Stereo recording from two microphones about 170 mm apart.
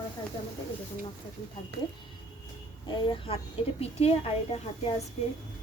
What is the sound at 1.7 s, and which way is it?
Speech, 70° right (ahead or behind).